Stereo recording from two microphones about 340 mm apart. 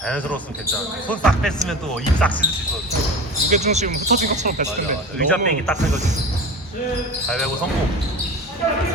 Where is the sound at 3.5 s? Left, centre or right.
Centre.